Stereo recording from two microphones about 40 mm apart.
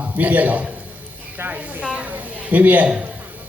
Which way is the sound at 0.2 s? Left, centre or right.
Right.